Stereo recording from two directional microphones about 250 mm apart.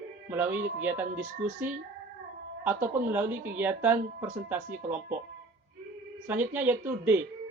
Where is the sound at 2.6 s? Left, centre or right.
Centre.